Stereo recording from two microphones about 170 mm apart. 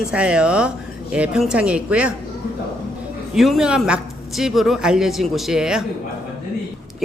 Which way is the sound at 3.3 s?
Centre (ahead or behind).